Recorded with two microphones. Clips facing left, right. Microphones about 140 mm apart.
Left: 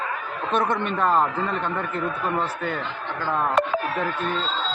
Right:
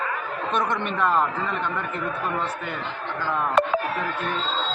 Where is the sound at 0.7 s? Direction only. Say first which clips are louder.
Even; 35° left (ahead or behind).